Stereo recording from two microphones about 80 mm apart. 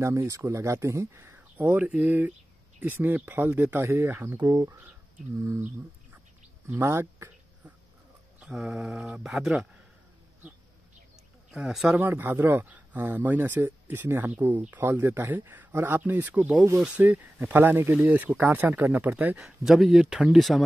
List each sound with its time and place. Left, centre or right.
0.0 s speech: right
4.4 s speech: right
6.7 s a sound: right
8.4 s speech: centre
11.9 s speech: right
19.4 s speech: centre